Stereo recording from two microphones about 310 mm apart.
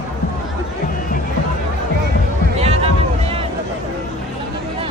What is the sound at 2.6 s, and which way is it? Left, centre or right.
Music, centre.